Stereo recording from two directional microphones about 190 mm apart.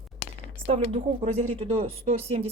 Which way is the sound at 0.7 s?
30° right (ahead or behind).